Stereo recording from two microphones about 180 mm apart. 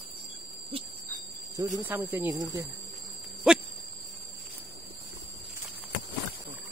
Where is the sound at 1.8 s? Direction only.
10° right (ahead or behind).